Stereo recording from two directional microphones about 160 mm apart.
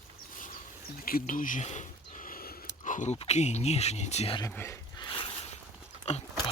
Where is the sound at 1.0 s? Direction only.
65° left (ahead or behind); by 4.4 s 40° left (ahead or behind).